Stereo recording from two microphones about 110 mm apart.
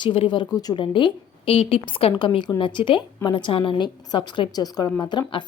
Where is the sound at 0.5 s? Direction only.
35° left (ahead or behind).